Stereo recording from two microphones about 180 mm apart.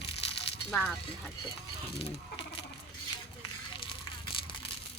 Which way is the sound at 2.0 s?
30° left (ahead or behind).